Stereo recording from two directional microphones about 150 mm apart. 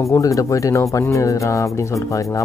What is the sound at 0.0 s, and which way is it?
Speech, 20° left (ahead or behind).